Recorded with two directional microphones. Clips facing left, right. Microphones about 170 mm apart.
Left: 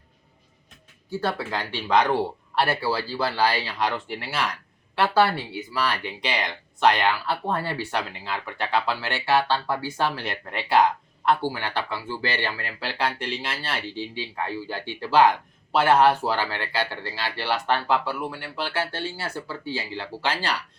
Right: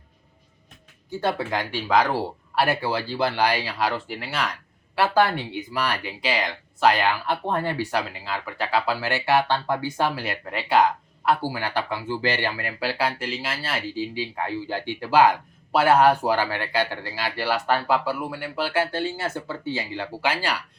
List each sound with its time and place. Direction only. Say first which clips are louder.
1.2 s speech: right 3 dB; 15° right (ahead or behind)
1.9 s speech: left 1 dB; 5° right (ahead or behind)
5.7 s speech: left 1 dB; 15° right (ahead or behind)
6.2 s speech: right 3 dB; centre (ahead or behind)
8.2 s speech: right 1 dB; centre (ahead or behind)